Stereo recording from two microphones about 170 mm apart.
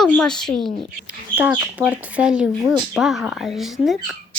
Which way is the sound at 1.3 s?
10° right (ahead or behind).